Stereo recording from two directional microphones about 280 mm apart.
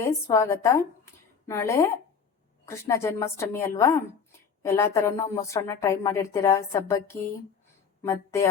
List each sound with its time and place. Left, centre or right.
0.0 s a woman's voice: centre